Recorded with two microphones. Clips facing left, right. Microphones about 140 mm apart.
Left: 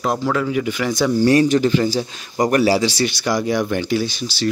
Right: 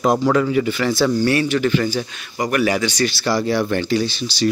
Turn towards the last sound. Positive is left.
turn(degrees=10)  # may be behind; listen again after turning